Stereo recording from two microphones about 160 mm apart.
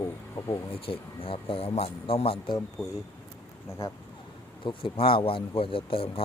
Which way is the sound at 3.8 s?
20° left (ahead or behind).